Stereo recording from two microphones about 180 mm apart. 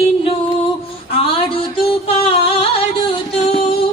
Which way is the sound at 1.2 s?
30° left (ahead or behind).